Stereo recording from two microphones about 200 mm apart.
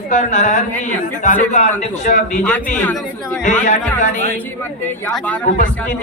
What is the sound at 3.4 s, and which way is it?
Speech, 40° left (ahead or behind).